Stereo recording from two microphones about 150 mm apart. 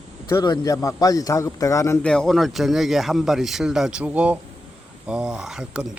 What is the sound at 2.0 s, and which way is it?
A man's voice, 5° left (ahead or behind).